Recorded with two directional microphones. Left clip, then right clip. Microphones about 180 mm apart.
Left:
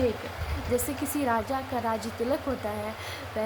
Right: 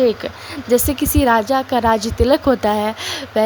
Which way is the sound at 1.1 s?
50° right (ahead or behind).